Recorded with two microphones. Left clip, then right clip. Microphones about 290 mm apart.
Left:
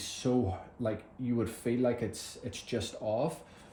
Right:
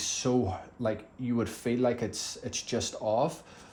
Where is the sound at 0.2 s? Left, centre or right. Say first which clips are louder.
Even; centre.